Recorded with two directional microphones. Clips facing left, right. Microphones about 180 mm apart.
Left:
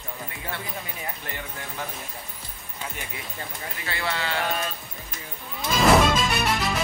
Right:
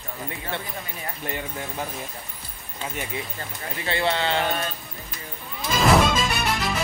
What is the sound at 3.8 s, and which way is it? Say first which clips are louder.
Speech: right 6 dB; 25° right (ahead or behind).